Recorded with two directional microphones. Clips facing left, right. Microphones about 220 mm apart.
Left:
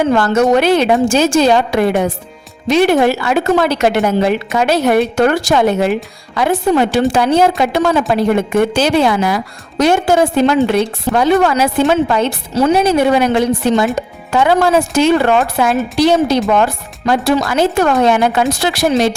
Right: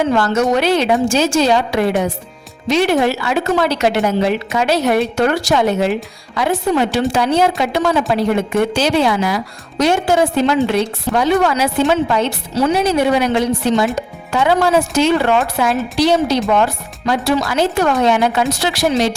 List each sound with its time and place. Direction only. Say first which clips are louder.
0.1 s a woman's voice: left 3 dB; 50° left (ahead or behind)